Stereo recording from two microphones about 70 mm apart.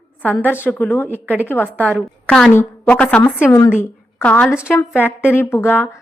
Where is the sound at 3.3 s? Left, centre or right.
Left.